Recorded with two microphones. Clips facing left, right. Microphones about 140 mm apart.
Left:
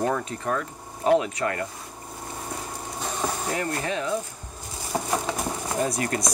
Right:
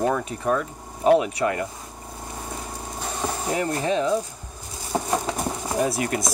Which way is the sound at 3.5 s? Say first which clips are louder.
Right 4 dB; 20° right (ahead or behind).